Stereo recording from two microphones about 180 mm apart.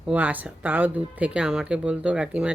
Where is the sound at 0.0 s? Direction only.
10° right (ahead or behind).